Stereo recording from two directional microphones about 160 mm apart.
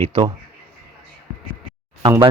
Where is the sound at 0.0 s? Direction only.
35° right (ahead or behind).